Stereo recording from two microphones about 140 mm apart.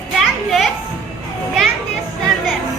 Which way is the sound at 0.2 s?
Centre (ahead or behind).